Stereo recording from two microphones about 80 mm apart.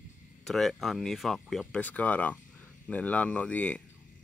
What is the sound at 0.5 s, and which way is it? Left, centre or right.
Speech, centre.